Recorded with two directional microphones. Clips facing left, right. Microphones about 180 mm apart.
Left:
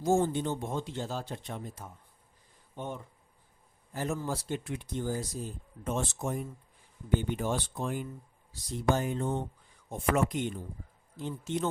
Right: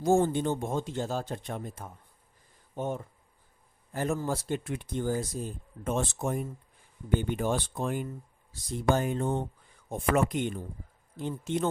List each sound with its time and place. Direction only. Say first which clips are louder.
0.0 s speech: right 3 dB; 55° right (ahead or behind)